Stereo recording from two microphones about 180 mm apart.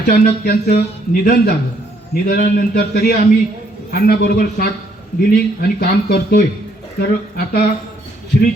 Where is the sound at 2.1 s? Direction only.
55° left (ahead or behind).